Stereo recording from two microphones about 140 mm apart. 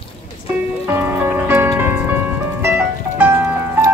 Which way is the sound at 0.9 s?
15° right (ahead or behind).